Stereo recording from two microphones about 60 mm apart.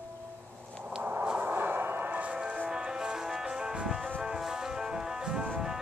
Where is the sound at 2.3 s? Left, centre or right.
Centre.